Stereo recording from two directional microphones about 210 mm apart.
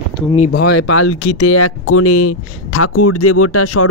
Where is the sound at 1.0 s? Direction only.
80° left.